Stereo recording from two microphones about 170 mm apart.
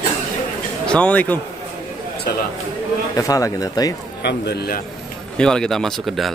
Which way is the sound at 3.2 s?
20° left (ahead or behind).